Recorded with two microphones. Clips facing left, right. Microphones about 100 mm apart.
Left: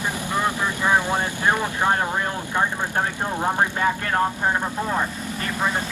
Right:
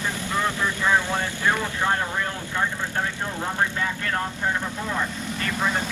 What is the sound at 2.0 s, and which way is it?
Speech, 40° left (ahead or behind).